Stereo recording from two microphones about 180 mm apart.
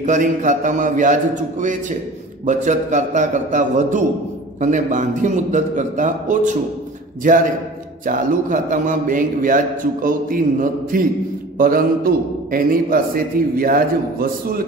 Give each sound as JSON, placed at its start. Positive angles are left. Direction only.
{"t": 0.0, "sound": "a man's voice", "side_deg": -45}
{"t": 2.4, "sound": "a man's voice", "side_deg": -45}